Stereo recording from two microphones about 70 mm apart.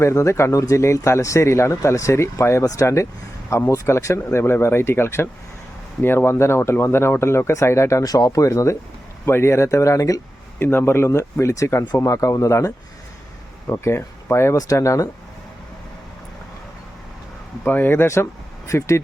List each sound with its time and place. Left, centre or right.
0.0 s speech: left
8.0 s speech: left
9.2 s speech: left
10.6 s speech: left
13.8 s speech: left
14.5 s speech: left
17.6 s speech: left